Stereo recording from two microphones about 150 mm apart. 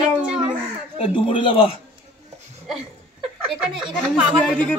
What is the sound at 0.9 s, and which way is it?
Speech, 40° left (ahead or behind).